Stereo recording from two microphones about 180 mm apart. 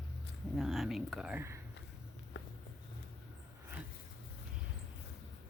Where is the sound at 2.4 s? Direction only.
85° left.